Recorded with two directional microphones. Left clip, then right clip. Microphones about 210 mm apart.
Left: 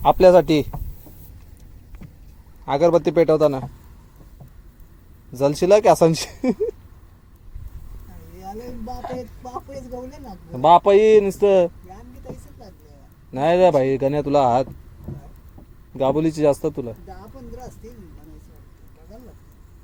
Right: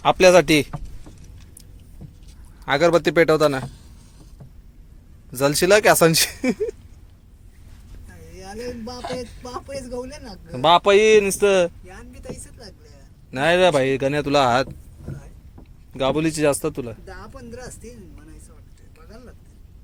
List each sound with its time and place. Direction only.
0.0 s a man's voice: 15° left (ahead or behind)
2.6 s speech: centre (ahead or behind)
5.3 s speech: 5° left (ahead or behind)
9.1 s a sound: 55° left (ahead or behind)
10.0 s a man's voice: 55° left (ahead or behind)
10.5 s a man's voice: 10° left (ahead or behind)
13.3 s a man's voice: 10° left (ahead or behind)
16.0 s a man's voice: 15° left (ahead or behind)